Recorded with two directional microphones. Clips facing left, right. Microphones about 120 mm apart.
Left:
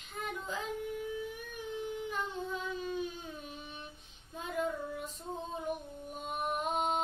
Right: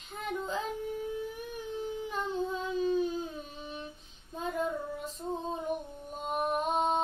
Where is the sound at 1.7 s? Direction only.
35° right (ahead or behind).